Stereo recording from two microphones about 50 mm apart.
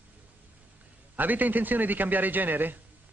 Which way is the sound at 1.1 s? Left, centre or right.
Right.